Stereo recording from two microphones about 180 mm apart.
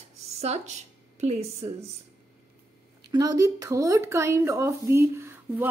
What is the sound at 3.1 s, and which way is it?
Speech, 20° right (ahead or behind).